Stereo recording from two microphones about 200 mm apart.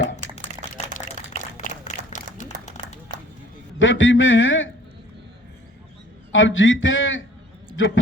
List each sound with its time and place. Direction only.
0.9 s applause: 35° left (ahead or behind)
3.8 s a man's voice: 70° left (ahead or behind)
6.3 s a man's voice: 75° left (ahead or behind)